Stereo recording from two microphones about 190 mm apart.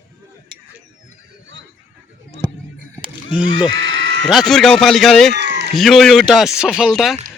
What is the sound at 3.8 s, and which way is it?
Sheep, 90° right.